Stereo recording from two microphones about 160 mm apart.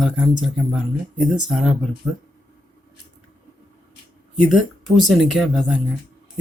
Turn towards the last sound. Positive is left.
turn(degrees=0)  # may be behind; listen again after turning